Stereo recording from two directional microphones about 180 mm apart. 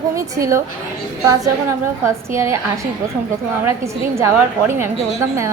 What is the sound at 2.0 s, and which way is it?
A woman's voice, 15° right (ahead or behind).